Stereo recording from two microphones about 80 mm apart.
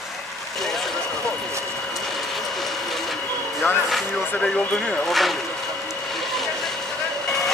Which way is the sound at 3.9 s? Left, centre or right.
Centre.